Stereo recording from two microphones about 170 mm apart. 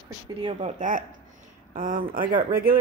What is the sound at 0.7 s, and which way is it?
Speech, 50° right (ahead or behind).